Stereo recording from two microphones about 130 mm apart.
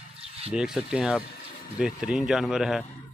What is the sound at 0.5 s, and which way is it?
Speech, 5° right (ahead or behind).